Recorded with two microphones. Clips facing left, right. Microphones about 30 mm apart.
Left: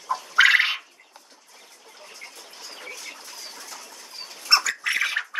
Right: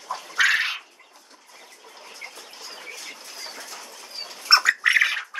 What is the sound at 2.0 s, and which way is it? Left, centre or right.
Bird, right.